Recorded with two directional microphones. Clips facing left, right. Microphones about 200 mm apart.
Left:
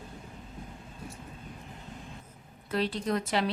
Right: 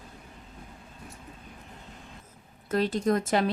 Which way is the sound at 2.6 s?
45° right (ahead or behind).